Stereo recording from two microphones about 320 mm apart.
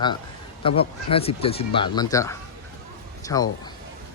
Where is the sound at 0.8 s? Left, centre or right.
Centre.